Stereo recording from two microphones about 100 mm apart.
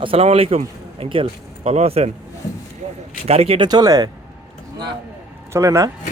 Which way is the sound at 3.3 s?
85° right.